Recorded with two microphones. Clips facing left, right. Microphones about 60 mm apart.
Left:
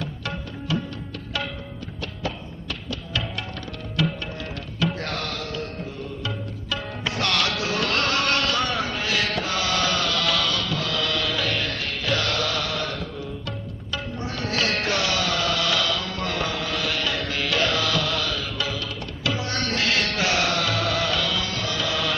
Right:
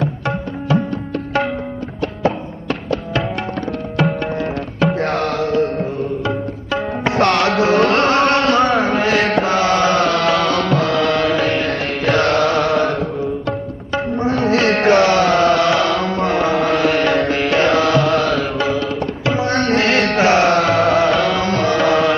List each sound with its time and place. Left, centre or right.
0.0 s music: right
2.0 s music: right